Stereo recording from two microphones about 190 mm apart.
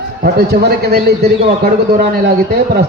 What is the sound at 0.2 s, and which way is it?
A man's voice, 55° right (ahead or behind).